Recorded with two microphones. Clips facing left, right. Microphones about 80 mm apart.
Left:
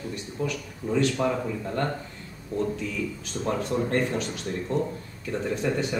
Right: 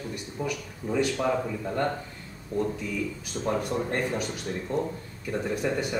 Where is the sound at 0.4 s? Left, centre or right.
Centre.